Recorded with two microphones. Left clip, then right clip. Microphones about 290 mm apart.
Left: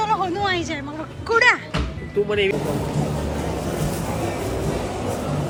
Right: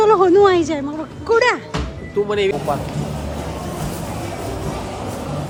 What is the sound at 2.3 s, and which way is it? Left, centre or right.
Speech, right.